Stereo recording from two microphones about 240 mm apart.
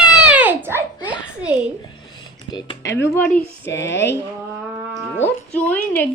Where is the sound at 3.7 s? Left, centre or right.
Left.